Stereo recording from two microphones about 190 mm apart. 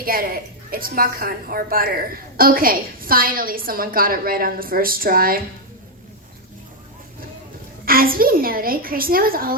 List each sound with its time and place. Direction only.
0.0 s a woman's voice: 50° right (ahead or behind)
7.9 s a woman's voice: 50° right (ahead or behind)